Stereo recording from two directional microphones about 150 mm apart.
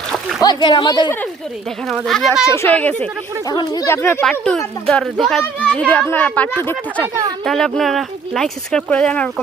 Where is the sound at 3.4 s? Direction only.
25° left (ahead or behind).